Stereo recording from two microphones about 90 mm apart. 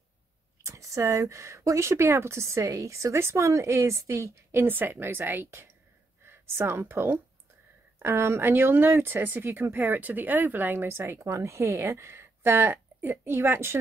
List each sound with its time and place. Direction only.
0.7 s speech: 35° right (ahead or behind)